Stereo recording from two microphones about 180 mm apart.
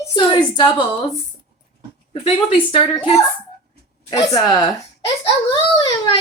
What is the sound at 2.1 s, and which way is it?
A woman's voice, 30° left (ahead or behind).